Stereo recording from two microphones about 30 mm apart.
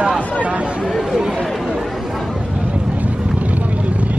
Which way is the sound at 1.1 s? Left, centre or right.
Centre.